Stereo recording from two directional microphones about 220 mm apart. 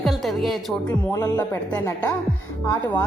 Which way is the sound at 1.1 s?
15° left (ahead or behind).